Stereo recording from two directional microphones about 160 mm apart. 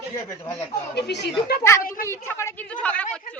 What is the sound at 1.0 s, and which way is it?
Speech, 90° left.